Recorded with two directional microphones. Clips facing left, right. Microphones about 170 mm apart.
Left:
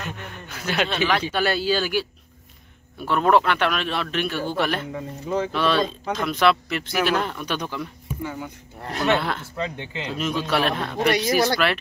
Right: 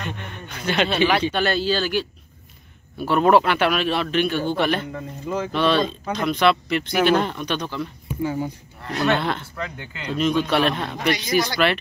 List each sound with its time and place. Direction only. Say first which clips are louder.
0.0 s speech: right 2 dB; 5° left (ahead or behind)
0.8 s a man's voice: right 4 dB; 5° right (ahead or behind)
1.2 s speech: right 2 dB; 10° left (ahead or behind)
3.0 s a man's voice: right 2 dB; 5° right (ahead or behind); by 7.9 s 10° left (ahead or behind)
9.1 s a man's voice: left 1 dB; 5° left (ahead or behind)
9.6 s speech: left 3 dB; 25° left (ahead or behind)
10.1 s a man's voice: right 4 dB; 5° left (ahead or behind)